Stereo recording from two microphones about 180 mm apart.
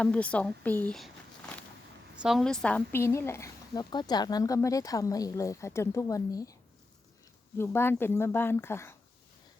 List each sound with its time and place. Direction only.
0.0 s speech: 5° left (ahead or behind)
2.1 s speech: centre (ahead or behind); by 6.6 s 20° left (ahead or behind)
7.6 s speech: 15° left (ahead or behind)